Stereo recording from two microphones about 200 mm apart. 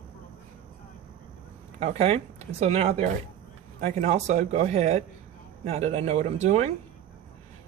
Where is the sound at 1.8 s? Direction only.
30° right (ahead or behind).